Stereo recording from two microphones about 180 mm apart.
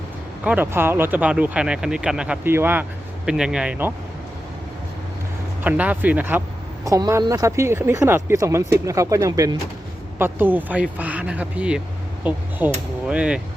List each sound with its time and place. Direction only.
0.4 s speech: 10° right (ahead or behind)
5.6 s speech: 10° right (ahead or behind)